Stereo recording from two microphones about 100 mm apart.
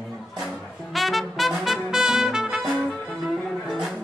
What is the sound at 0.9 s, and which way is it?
Trumpet, centre (ahead or behind).